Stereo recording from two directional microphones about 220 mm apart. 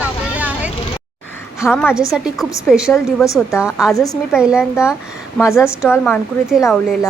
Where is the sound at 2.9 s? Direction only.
15° left (ahead or behind).